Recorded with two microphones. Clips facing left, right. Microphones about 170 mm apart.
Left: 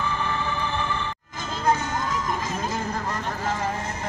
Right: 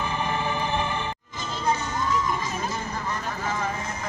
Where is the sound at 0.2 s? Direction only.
15° right (ahead or behind).